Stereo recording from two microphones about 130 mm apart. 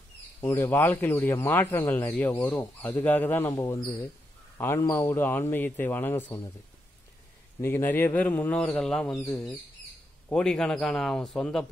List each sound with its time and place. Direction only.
0.4 s a man's voice: 15° left (ahead or behind)
7.6 s a man's voice: 15° left (ahead or behind)
10.3 s a man's voice: 5° left (ahead or behind)